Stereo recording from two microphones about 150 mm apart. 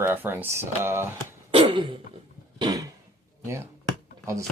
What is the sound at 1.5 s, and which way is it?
Dog, 35° right (ahead or behind).